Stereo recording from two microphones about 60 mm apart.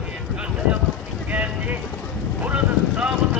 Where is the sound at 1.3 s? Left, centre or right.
Right.